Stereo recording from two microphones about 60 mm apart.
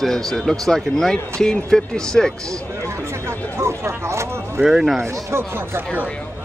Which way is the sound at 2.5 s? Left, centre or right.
Right.